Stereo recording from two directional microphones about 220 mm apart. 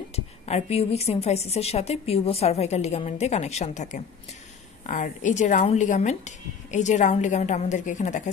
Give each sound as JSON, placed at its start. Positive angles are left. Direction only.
{"t": 0.1, "sound": "a woman's voice", "side_deg": 30}